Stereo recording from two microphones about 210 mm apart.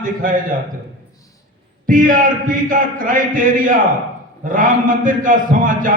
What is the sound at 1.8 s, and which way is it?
A man's voice, 40° right (ahead or behind).